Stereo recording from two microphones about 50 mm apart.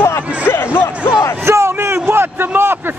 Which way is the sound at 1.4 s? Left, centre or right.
Right.